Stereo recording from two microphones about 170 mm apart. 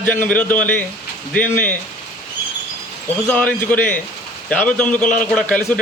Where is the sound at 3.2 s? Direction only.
10° left (ahead or behind).